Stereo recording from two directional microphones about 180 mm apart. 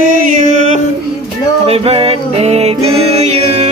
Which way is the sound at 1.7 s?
35° right (ahead or behind).